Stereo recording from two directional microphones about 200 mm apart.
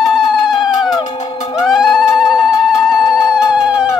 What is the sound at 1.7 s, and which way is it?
Cat, centre (ahead or behind).